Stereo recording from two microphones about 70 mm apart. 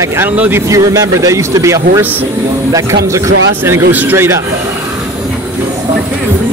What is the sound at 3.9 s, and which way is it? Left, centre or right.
Speech, right.